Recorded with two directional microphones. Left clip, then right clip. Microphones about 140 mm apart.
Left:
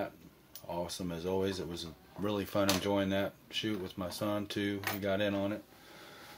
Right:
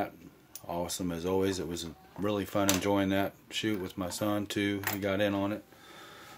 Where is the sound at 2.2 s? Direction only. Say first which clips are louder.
Right 2 dB; 20° right (ahead or behind).